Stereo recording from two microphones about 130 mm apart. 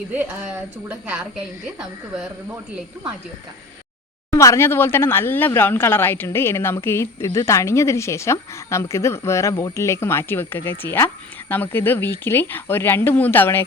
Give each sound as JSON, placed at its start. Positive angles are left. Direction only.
{"t": 0.1, "sound": "a woman's voice", "side_deg": -10}
{"t": 4.3, "sound": "speech", "side_deg": 25}